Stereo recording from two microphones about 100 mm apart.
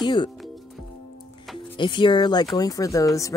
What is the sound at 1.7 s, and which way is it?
Speech, 55° left (ahead or behind).